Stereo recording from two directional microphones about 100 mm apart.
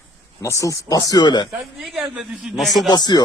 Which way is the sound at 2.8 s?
40° left (ahead or behind).